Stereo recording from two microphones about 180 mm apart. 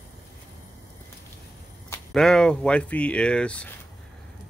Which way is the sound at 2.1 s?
5° left (ahead or behind).